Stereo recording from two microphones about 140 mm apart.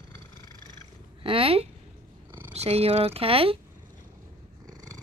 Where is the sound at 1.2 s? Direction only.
40° right (ahead or behind).